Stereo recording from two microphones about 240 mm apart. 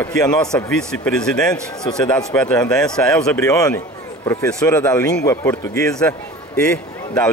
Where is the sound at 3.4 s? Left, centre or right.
Centre.